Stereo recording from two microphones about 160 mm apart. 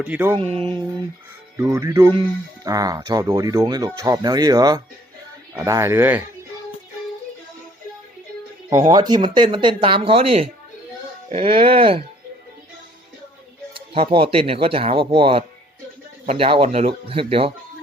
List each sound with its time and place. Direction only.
0.0 s speech: 10° right (ahead or behind)
0.3 s speech: 35° right (ahead or behind)
1.5 s speech: 20° right (ahead or behind)
8.7 s speech: 25° right (ahead or behind)
11.8 s speech: 35° right (ahead or behind)
13.7 s speech: 35° right (ahead or behind)